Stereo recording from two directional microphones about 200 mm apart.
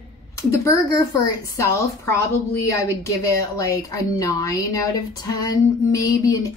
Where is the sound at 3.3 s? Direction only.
15° left (ahead or behind).